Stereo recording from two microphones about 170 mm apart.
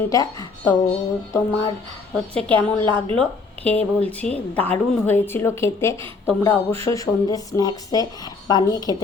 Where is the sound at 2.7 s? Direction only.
30° right (ahead or behind).